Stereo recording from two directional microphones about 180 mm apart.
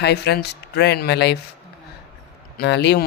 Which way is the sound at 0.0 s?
65° left (ahead or behind).